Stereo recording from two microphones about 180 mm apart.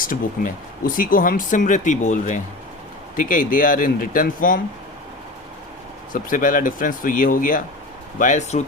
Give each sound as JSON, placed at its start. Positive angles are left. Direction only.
{"t": 0.0, "sound": "speech", "side_deg": 50}
{"t": 6.1, "sound": "speech", "side_deg": 50}